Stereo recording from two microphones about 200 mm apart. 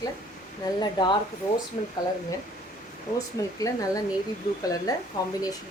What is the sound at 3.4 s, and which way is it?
Speech, 15° left (ahead or behind).